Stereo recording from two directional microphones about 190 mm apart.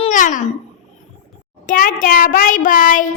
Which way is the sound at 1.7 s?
45° left (ahead or behind).